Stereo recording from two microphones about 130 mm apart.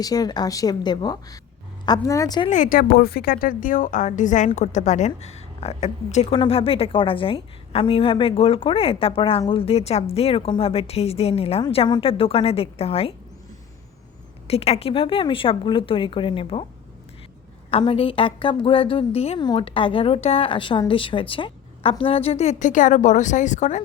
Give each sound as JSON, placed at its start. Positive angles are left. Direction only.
{"t": 0.0, "sound": "a woman's voice", "side_deg": 30}
{"t": 2.5, "sound": "a woman's voice", "side_deg": 85}
{"t": 6.3, "sound": "a woman's voice", "side_deg": 45}
{"t": 14.4, "sound": "a woman's voice", "side_deg": 50}
{"t": 17.7, "sound": "a woman's voice", "side_deg": 50}
{"t": 19.4, "sound": "a woman's voice", "side_deg": 40}